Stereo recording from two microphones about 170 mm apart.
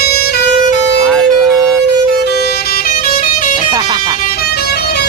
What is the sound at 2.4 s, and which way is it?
Music, 65° left (ahead or behind).